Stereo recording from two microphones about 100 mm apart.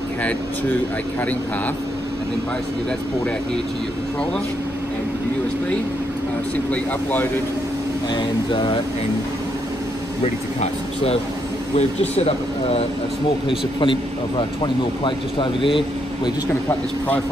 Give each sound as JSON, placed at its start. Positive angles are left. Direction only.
{"t": 6.5, "sound": "speech", "side_deg": 15}
{"t": 8.1, "sound": "a sound", "side_deg": 50}
{"t": 10.2, "sound": "speech", "side_deg": 90}
{"t": 12.2, "sound": "speech", "side_deg": 85}
{"t": 13.5, "sound": "speech", "side_deg": 60}